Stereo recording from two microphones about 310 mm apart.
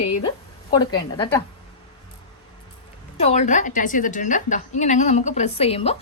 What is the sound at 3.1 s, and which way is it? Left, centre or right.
A woman's voice, left.